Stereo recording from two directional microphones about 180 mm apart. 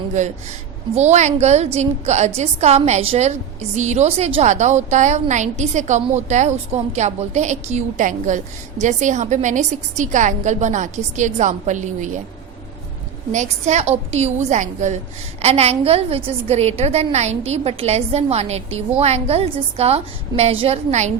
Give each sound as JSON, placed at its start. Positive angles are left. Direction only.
{"t": 0.2, "sound": "a woman's voice", "side_deg": -40}
{"t": 13.3, "sound": "a woman's voice", "side_deg": -40}